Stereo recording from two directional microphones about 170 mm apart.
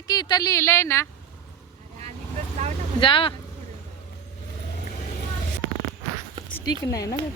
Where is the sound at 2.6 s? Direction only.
40° right (ahead or behind).